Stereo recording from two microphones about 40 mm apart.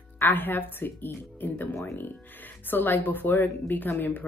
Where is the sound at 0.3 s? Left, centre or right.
Left.